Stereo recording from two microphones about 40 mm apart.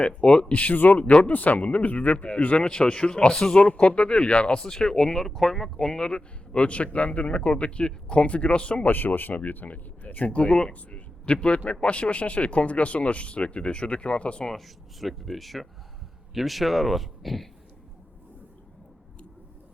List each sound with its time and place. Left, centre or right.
0.0 s speech: left
2.1 s speech: left
2.6 s speech: left
4.6 s speech: centre
6.1 s speech: left
8.8 s speech: left
10.7 s a sound: left
11.3 s speech: left
14.5 s speech: centre